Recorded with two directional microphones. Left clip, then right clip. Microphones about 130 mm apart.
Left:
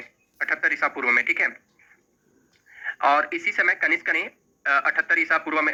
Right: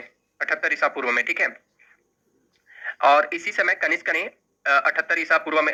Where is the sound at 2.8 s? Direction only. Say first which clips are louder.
Right 3 dB; 40° right (ahead or behind).